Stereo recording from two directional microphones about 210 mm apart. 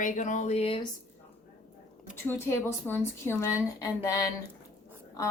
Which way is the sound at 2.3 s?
10° left (ahead or behind).